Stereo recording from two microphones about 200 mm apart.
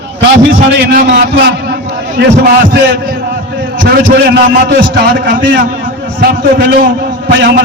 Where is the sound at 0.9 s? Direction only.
45° right (ahead or behind).